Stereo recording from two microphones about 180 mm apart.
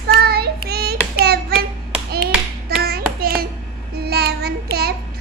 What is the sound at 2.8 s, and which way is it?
Clapping, 60° right (ahead or behind).